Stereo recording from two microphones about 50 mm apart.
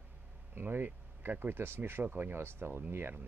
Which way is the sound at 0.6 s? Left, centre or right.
Right.